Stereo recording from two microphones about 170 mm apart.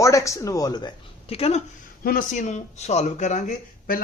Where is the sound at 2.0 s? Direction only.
50° left (ahead or behind).